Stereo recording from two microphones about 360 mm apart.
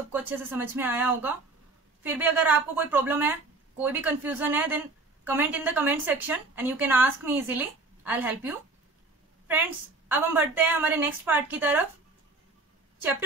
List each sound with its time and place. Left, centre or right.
0.1 s a woman's voice: centre